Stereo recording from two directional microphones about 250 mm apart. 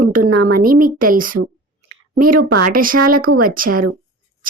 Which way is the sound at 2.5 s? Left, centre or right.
Right.